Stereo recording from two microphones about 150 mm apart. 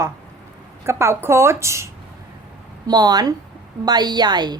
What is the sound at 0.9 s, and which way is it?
A woman's voice, 15° right (ahead or behind).